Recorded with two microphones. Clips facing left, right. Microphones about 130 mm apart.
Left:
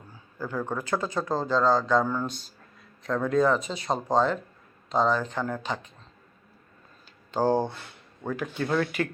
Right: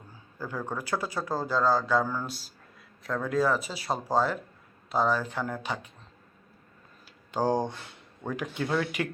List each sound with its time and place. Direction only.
0.3 s speech: 10° right (ahead or behind)
7.3 s speech: 15° right (ahead or behind)